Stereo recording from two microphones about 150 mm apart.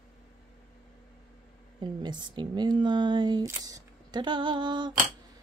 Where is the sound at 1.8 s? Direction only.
30° right (ahead or behind).